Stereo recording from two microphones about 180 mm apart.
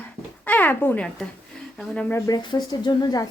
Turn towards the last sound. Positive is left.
turn(degrees=20)  # may be behind; listen again after turning